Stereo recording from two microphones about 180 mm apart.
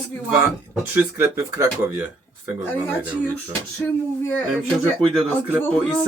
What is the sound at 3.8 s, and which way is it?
Speech, 10° left (ahead or behind).